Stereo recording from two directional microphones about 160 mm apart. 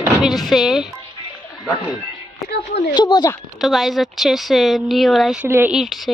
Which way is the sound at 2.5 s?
90° left.